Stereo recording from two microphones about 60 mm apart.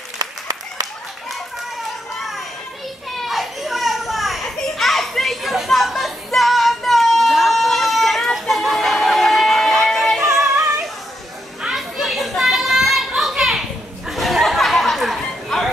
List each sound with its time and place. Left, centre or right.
0.2 s applause: right
3.2 s children playing: centre
11.7 s children playing: centre
13.4 s a sound: centre